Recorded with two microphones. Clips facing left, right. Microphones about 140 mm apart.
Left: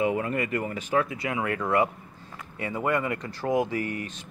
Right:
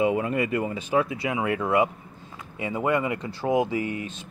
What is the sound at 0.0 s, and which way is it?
Speech, 20° right (ahead or behind).